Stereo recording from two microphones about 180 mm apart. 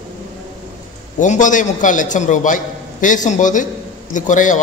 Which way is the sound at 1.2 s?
45° left (ahead or behind).